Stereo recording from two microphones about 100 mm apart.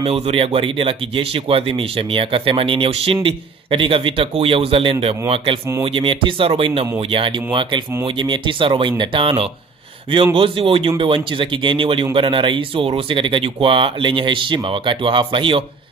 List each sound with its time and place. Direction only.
0.0 s speech: 80° right
5.9 s speech: 60° right (ahead or behind)